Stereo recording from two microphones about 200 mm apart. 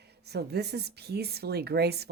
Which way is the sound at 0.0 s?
55° right (ahead or behind).